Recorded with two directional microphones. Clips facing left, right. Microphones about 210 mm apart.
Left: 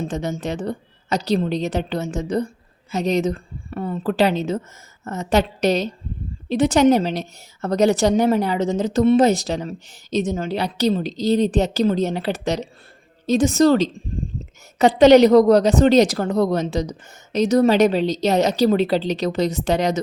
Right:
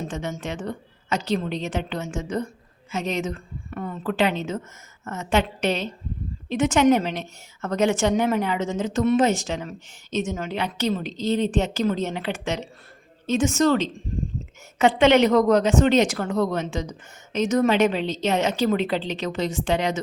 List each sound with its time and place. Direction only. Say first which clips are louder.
0.0 s a woman's voice: left 5 dB; 35° left (ahead or behind)